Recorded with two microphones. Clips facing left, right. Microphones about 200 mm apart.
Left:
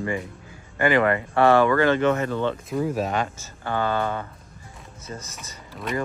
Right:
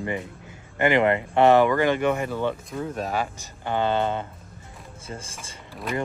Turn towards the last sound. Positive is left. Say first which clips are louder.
# left 1 dB
turn(degrees=0)  # may be behind; listen again after turning